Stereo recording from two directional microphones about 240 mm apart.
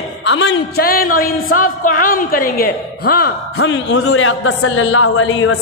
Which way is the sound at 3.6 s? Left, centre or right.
Left.